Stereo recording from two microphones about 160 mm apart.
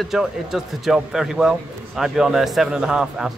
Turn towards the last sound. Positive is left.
turn(degrees=-5)  # may be behind; listen again after turning